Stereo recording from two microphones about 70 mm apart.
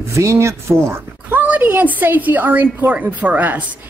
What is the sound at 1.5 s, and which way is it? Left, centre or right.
A woman's voice, right.